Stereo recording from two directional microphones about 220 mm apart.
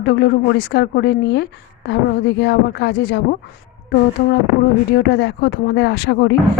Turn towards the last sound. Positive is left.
turn(degrees=50)  # may be behind; listen again after turning